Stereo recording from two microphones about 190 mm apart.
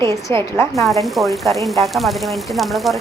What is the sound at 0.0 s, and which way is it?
Speech, 15° left (ahead or behind).